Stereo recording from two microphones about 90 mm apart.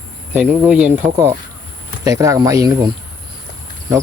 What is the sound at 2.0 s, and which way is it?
Speech, 40° right (ahead or behind).